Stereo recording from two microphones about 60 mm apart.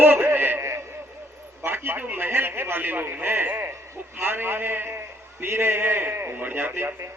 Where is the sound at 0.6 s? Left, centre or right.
Right.